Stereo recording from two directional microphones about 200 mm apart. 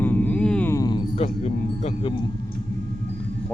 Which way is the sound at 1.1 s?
30° left (ahead or behind).